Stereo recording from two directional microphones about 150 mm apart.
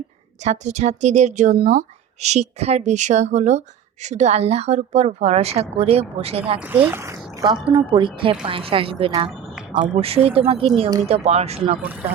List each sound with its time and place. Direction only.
0.4 s speech: 50° right (ahead or behind)
6.6 s speech: 15° right (ahead or behind); by 9.1 s 35° right (ahead or behind)
9.6 s a sound: 5° right (ahead or behind)
10.0 s speech: 40° right (ahead or behind)